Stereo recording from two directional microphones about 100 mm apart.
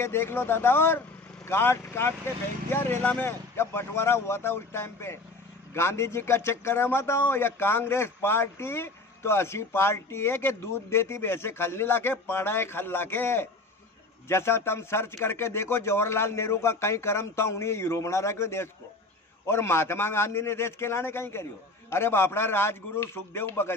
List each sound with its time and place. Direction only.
0.0 s a man's voice: 25° left (ahead or behind)